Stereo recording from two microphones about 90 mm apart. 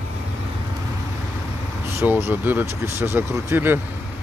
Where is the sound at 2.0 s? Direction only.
25° right (ahead or behind).